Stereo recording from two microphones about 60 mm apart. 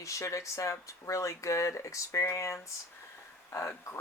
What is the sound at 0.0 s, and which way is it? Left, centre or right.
Speech, left.